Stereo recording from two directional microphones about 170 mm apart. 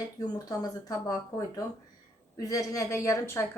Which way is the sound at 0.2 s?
20° left (ahead or behind).